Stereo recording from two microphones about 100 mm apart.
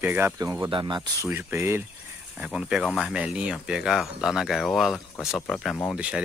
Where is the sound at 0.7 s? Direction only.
55° right (ahead or behind).